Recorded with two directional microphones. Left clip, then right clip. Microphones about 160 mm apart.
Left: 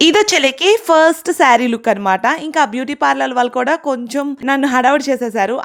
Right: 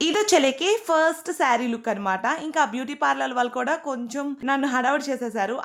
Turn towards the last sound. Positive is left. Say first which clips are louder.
# left 10 dB
turn(degrees=50)  # may be behind; listen again after turning